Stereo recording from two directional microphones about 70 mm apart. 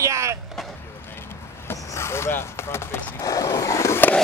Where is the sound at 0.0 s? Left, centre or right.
Right.